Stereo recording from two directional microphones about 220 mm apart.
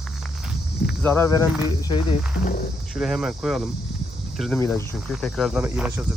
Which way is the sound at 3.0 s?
Centre (ahead or behind).